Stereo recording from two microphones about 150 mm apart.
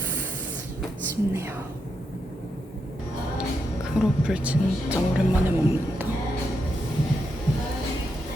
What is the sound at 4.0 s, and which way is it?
A woman's voice, 5° right (ahead or behind).